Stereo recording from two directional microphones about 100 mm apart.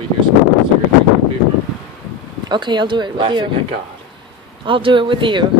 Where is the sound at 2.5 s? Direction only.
50° right (ahead or behind).